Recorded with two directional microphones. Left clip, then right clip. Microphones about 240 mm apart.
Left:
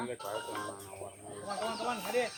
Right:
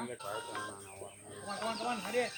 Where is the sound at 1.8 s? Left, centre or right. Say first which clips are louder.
Left 1 dB; centre.